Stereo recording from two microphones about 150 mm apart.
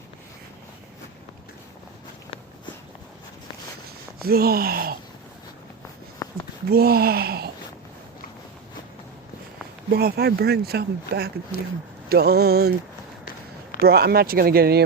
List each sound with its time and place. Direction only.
4.2 s speech: 90° right
6.2 s a sound: 25° left (ahead or behind)
6.7 s speech: 90° right
9.9 s speech: 90° right
13.8 s speech: 90° right